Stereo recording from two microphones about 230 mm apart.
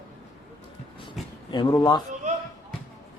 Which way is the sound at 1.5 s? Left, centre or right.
Centre.